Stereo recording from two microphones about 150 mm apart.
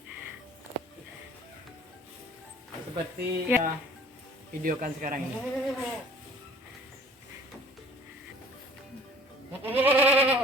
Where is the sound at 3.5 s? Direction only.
15° right (ahead or behind).